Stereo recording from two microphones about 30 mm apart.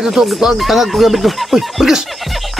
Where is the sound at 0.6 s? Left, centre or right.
Centre.